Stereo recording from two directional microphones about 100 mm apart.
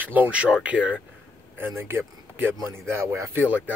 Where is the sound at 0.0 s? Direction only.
15° right (ahead or behind).